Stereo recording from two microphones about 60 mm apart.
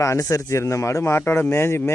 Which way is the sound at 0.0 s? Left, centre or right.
Left.